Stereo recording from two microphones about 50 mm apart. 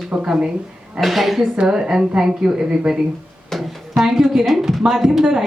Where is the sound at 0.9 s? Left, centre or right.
Centre.